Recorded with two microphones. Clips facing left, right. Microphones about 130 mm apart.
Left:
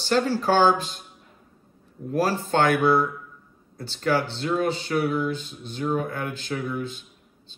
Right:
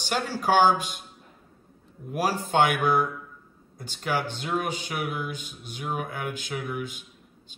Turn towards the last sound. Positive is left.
turn(degrees=-15)  # may be behind; listen again after turning